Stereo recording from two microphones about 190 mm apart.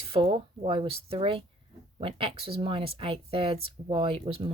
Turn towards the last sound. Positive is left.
turn(degrees=-30)  # may be behind; listen again after turning